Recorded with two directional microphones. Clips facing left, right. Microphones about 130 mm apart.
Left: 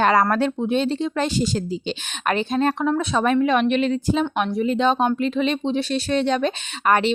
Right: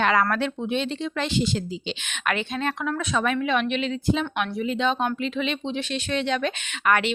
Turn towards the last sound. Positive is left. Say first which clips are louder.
# left 4 dB
turn(degrees=35)  # may be behind; listen again after turning